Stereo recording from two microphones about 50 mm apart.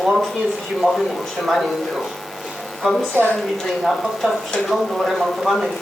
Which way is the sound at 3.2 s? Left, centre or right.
Right.